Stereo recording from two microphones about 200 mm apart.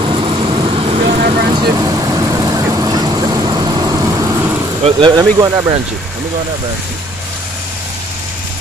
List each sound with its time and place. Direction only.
0.0 s vehicle: 25° right (ahead or behind)
1.0 s vehicle: 45° right (ahead or behind)
1.5 s vehicle: 20° right (ahead or behind)
4.8 s speech: 20° right (ahead or behind)